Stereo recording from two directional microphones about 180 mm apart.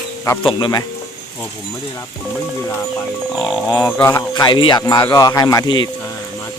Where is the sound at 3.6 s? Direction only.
20° left (ahead or behind).